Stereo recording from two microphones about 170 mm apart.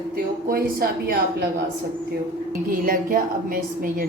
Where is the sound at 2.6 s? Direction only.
55° right (ahead or behind).